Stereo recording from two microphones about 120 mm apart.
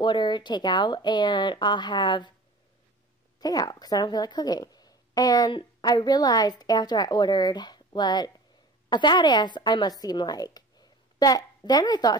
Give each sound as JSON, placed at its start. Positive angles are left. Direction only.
{"t": 0.0, "sound": "a woman's voice", "side_deg": 40}
{"t": 3.3, "sound": "a woman's voice", "side_deg": 35}